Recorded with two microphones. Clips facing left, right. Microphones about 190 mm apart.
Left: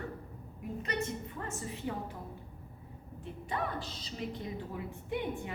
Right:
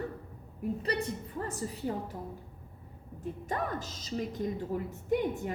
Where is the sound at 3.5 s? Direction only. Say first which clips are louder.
Right 1 dB; 45° right (ahead or behind).